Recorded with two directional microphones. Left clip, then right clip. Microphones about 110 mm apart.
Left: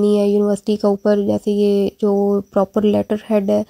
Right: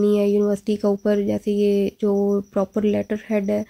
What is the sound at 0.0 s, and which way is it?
Speech, 40° left (ahead or behind).